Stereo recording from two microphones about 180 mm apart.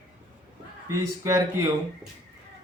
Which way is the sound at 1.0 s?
15° right (ahead or behind).